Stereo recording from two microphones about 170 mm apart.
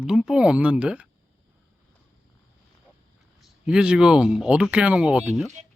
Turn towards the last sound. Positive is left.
turn(degrees=-5)  # may be behind; listen again after turning